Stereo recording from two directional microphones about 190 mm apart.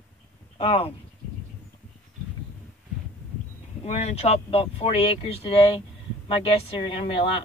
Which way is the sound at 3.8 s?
35° left (ahead or behind).